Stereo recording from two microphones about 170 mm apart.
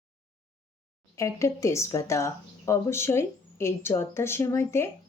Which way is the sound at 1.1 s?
15° left (ahead or behind).